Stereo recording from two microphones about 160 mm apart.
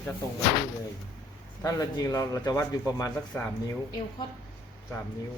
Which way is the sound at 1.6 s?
20° left (ahead or behind).